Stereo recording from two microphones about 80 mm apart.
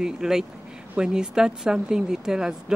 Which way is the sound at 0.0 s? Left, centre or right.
Centre.